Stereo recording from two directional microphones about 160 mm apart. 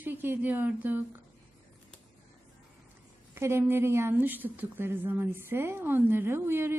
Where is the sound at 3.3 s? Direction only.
15° right (ahead or behind).